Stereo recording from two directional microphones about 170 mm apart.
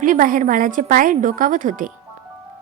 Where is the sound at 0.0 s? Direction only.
50° right (ahead or behind).